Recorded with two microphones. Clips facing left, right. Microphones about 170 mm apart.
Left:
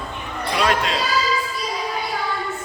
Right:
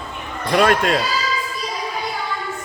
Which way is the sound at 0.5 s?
50° right (ahead or behind).